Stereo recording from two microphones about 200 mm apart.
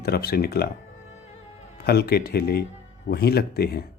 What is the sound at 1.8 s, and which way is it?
Speech, 50° left (ahead or behind).